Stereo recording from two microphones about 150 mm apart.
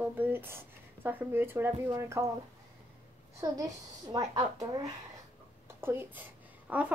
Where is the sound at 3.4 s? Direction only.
25° right (ahead or behind).